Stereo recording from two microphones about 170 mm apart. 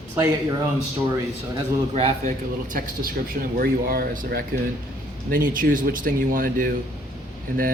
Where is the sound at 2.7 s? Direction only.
55° right (ahead or behind).